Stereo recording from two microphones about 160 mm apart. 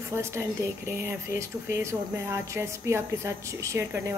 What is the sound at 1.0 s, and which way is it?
Speech, 20° right (ahead or behind).